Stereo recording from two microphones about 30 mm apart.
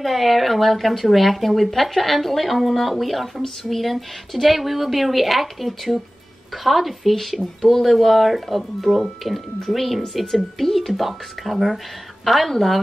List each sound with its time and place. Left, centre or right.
0.0 s speech: centre